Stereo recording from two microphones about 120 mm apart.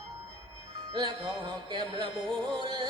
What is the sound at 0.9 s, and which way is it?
Music, 40° right (ahead or behind).